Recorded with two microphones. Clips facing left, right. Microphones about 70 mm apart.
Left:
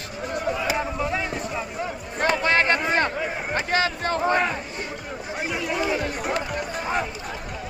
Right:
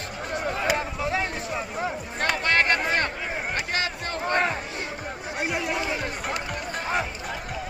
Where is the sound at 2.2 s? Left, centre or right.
Left.